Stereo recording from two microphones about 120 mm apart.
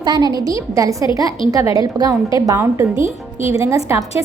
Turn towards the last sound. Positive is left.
turn(degrees=-30)  # may be behind; listen again after turning